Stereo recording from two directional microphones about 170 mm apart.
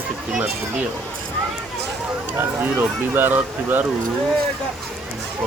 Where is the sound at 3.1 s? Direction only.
10° right (ahead or behind).